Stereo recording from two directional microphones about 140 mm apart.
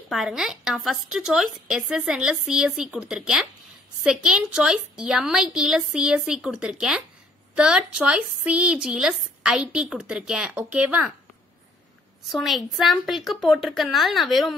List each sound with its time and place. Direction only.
0.1 s a woman's voice: centre (ahead or behind)
12.3 s a woman's voice: centre (ahead or behind)